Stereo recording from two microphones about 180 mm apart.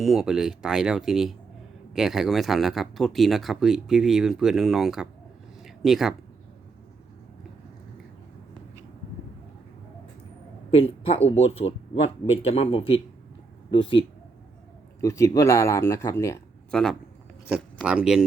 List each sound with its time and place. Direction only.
0.0 s speech: centre (ahead or behind)
10.7 s speech: 35° left (ahead or behind)
15.0 s speech: 15° left (ahead or behind)
16.7 s speech: 5° left (ahead or behind)